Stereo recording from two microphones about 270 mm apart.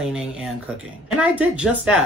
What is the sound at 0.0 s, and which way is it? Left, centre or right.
Speech, centre.